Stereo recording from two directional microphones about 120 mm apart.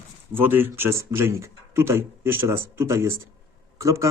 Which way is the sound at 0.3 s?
15° right (ahead or behind).